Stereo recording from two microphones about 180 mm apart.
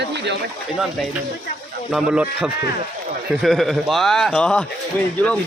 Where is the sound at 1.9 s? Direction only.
5° right (ahead or behind).